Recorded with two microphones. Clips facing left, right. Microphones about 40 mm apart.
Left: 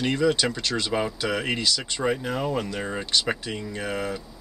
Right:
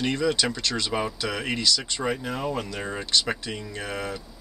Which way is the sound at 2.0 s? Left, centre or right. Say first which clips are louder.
Left 5 dB; centre.